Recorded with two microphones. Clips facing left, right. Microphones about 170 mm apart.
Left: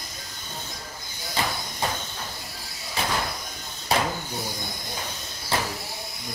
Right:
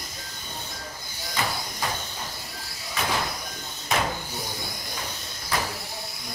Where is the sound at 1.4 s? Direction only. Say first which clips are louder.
Left 1 dB; 30° left (ahead or behind).